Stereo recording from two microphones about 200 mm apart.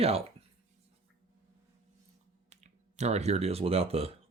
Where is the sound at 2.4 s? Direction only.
35° right (ahead or behind).